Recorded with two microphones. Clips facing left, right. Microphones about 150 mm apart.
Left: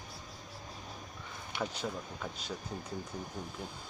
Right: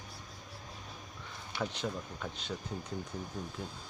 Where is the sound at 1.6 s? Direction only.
5° left (ahead or behind).